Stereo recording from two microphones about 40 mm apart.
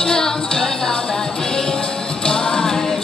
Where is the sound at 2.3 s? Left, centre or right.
Centre.